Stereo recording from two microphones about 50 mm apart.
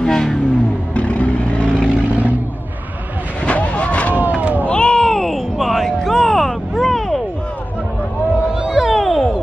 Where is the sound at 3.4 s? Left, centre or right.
Left.